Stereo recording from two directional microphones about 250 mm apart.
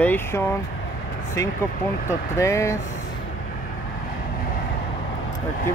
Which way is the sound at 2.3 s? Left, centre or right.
Centre.